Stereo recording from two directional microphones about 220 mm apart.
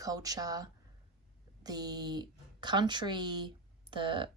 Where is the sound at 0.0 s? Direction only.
15° right (ahead or behind).